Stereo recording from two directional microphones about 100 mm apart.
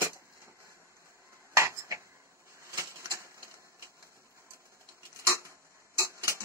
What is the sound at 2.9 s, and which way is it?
Typewriter, 30° right (ahead or behind).